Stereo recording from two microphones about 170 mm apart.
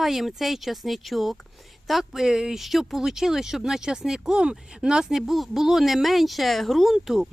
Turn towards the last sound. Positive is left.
turn(degrees=-5)  # may be behind; listen again after turning